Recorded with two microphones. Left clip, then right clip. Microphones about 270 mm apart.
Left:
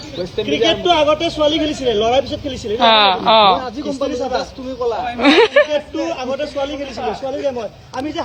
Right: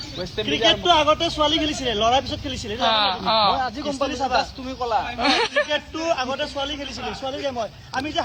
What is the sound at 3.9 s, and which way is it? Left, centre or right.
Speech, centre.